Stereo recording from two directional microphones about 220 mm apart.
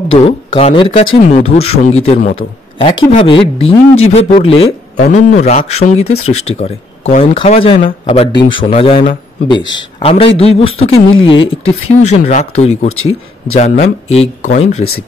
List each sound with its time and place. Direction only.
0.1 s a man's voice: 30° left (ahead or behind)
11.3 s speech: 65° left (ahead or behind)
11.9 s speech: 30° left (ahead or behind)
12.8 s speech: 70° left (ahead or behind)
13.6 s speech: 30° left (ahead or behind)